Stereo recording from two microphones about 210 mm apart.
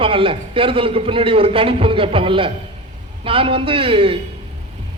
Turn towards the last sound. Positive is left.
turn(degrees=-25)  # may be behind; listen again after turning